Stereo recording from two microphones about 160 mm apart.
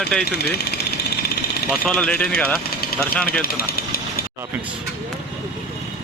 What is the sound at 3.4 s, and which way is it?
Speech, 70° left (ahead or behind).